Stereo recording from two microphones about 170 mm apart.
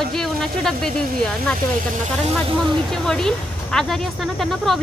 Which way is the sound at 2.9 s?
5° left (ahead or behind).